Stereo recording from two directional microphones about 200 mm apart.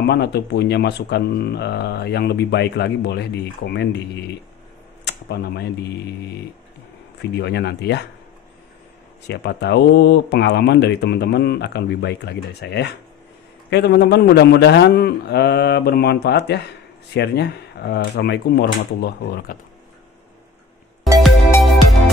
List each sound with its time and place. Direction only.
0.0 s speech: 55° left (ahead or behind)
7.2 s speech: 60° left (ahead or behind)
9.3 s speech: 55° left (ahead or behind)
21.2 s music: centre (ahead or behind)